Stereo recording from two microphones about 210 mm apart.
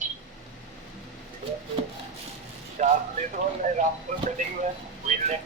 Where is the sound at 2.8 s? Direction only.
35° right (ahead or behind).